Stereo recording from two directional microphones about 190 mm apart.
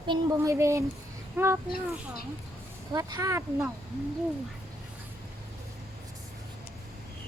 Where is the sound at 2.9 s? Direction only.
20° right (ahead or behind).